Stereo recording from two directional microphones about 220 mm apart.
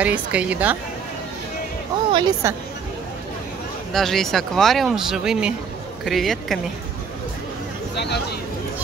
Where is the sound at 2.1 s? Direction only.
20° right (ahead or behind).